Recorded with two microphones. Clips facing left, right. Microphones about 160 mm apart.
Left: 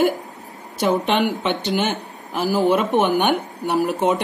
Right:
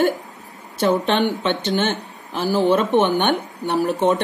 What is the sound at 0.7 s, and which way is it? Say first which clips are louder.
A woman's voice: right 1 dB; 15° left (ahead or behind).